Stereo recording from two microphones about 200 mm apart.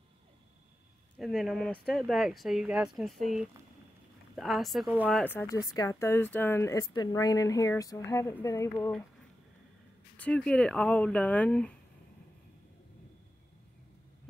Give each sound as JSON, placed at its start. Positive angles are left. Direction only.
{"t": 1.1, "sound": "speech", "side_deg": 0}
{"t": 5.2, "sound": "speech", "side_deg": 10}
{"t": 10.1, "sound": "speech", "side_deg": 5}